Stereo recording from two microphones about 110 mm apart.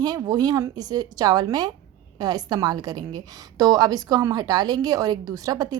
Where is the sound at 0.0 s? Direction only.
35° right (ahead or behind).